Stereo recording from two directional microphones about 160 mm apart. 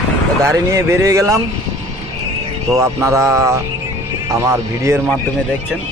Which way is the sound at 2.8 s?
20° right (ahead or behind).